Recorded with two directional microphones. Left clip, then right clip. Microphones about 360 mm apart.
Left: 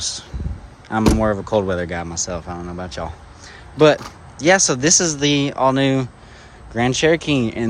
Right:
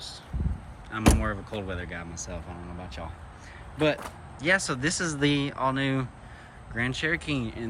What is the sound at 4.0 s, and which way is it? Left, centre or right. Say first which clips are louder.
Speech: left 11 dB; centre.